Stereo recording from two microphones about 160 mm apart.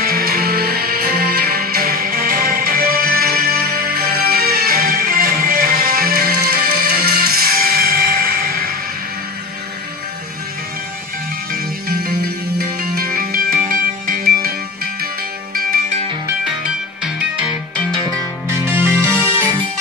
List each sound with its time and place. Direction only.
0.0 s music: 70° right (ahead or behind)
11.5 s music: 80° right
17.0 s music: 5° right (ahead or behind)
18.0 s music: 15° right (ahead or behind)